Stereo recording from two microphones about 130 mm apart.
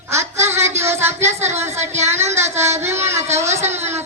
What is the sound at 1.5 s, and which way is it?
Speech, 20° right (ahead or behind).